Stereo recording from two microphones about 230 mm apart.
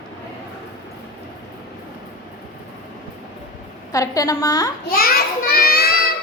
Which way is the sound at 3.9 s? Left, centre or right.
Centre.